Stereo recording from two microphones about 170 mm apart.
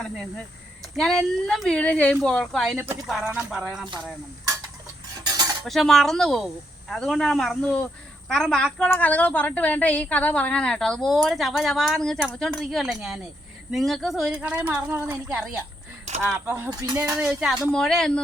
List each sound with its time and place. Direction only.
0.0 s a woman's voice: 5° left (ahead or behind)
5.6 s a woman's voice: centre (ahead or behind); by 17.0 s 20° right (ahead or behind)
17.2 s a woman's voice: 5° right (ahead or behind)